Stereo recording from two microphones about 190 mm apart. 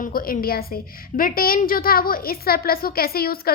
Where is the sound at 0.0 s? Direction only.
50° left (ahead or behind).